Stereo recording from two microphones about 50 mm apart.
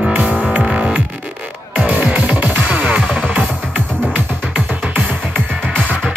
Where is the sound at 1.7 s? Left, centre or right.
Right.